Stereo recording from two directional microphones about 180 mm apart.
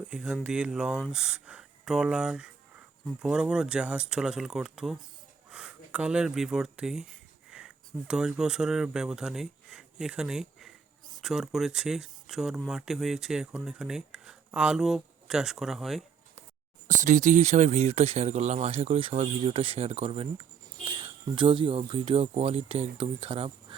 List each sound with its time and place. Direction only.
0.1 s speech: 5° right (ahead or behind)
16.9 s speech: 45° right (ahead or behind)